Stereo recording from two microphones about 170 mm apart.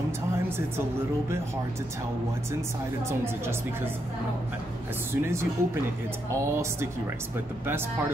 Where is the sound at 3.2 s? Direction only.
15° right (ahead or behind).